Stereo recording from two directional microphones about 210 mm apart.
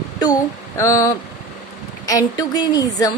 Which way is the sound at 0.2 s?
20° left (ahead or behind).